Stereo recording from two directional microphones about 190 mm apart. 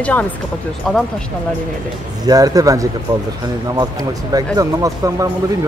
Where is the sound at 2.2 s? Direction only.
20° right (ahead or behind).